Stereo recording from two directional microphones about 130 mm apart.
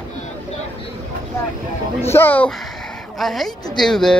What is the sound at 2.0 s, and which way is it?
Speech, 20° left (ahead or behind).